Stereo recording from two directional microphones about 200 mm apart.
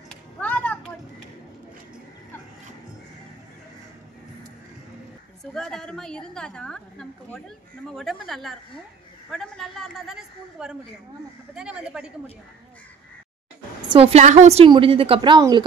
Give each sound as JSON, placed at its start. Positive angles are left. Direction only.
{"t": 0.1, "sound": "a sound", "side_deg": 5}
{"t": 5.4, "sound": "a woman's voice", "side_deg": 0}
{"t": 13.8, "sound": "a woman's voice", "side_deg": -30}